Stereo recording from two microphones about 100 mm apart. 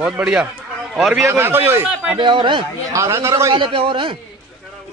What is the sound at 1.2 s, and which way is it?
Speech, 25° right (ahead or behind).